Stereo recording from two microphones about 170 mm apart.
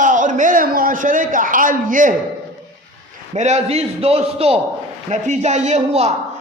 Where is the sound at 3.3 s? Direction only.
40° right (ahead or behind).